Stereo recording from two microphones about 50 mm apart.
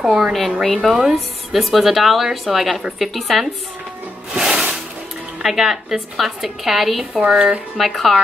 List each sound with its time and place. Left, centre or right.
0.0 s a woman's voice: centre
4.3 s music: centre
5.4 s a woman's voice: centre
7.2 s speech: centre
7.7 s a woman's voice: centre